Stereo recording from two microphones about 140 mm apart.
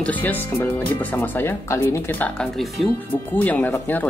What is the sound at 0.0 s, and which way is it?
Speech, 10° left (ahead or behind).